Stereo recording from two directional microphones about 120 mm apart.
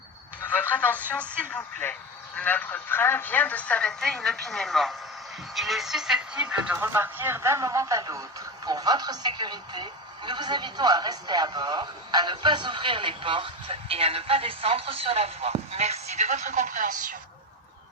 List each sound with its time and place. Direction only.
0.5 s a man's voice: 15° left (ahead or behind); by 6.7 s 10° right (ahead or behind)
6.7 s speech: 20° right (ahead or behind); by 17.2 s 90° right